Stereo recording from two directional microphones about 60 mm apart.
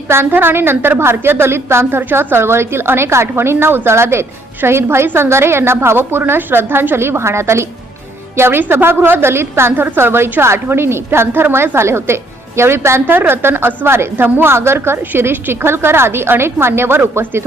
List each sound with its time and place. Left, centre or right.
0.1 s a woman's voice: right
8.4 s a woman's voice: right